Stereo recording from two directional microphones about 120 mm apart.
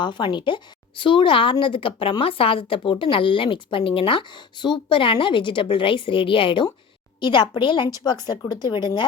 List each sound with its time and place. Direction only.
0.0 s speech: 40° left (ahead or behind)